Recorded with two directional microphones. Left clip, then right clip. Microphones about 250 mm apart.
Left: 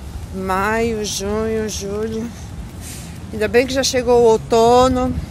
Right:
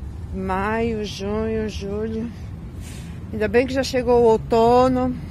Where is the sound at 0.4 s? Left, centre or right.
Centre.